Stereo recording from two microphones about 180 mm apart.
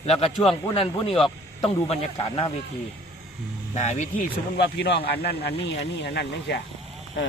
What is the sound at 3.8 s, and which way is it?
Speech, 40° left (ahead or behind).